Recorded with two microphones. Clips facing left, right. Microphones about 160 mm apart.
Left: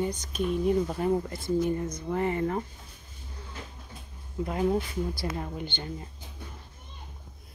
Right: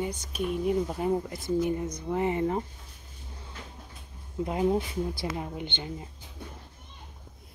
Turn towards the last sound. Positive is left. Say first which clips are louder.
# even
turn(degrees=-15)  # may be behind; listen again after turning